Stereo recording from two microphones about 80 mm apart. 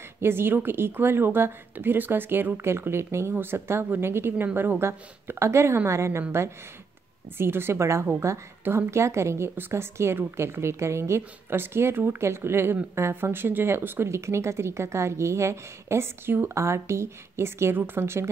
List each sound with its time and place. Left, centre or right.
0.2 s a woman's voice: right
7.3 s speech: right